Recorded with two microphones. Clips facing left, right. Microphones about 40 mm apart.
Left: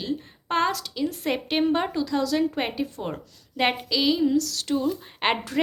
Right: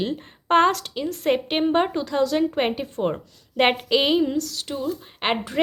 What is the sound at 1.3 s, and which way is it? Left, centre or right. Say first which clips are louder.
Speech: right 4 dB; right.